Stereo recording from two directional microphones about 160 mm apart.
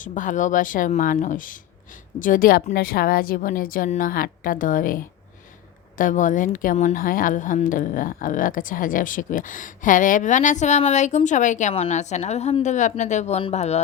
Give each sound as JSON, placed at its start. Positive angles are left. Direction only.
{"t": 0.0, "sound": "speech", "side_deg": 55}
{"t": 6.0, "sound": "a woman's voice", "side_deg": 55}